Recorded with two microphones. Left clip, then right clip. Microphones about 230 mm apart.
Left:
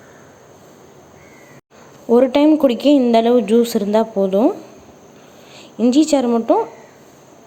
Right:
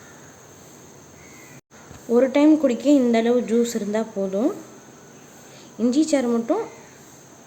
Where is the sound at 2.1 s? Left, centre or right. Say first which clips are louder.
Left 4 dB; centre.